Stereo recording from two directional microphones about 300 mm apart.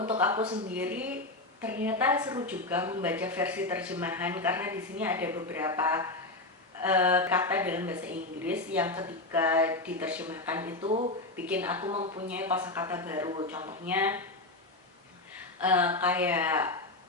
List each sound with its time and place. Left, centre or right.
0.2 s a woman's voice: centre
10.8 s speech: right
11.3 s a woman's voice: centre
11.9 s speech: centre
12.3 s a woman's voice: centre
15.6 s a woman's voice: centre